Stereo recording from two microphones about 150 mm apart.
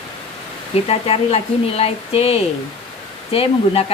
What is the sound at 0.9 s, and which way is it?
Speech, 40° left (ahead or behind).